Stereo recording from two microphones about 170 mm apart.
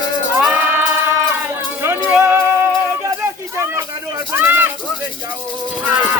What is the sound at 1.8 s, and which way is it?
Music, 15° right (ahead or behind).